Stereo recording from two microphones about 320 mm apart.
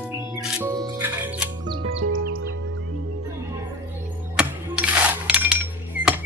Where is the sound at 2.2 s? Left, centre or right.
Right.